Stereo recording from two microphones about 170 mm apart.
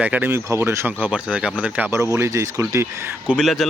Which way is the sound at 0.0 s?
10° right (ahead or behind).